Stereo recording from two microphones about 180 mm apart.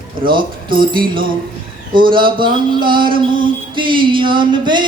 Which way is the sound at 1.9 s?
25° right (ahead or behind).